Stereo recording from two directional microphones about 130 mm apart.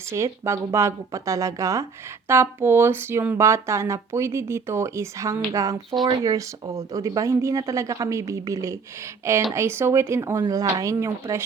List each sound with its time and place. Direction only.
0.1 s speech: 20° right (ahead or behind)